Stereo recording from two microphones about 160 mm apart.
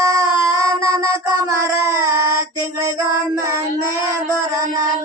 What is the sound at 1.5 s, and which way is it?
Female singing, 20° right (ahead or behind).